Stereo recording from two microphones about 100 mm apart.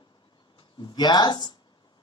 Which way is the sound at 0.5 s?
50° left (ahead or behind).